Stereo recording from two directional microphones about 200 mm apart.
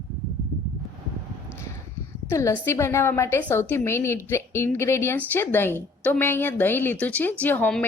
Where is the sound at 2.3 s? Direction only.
15° left (ahead or behind).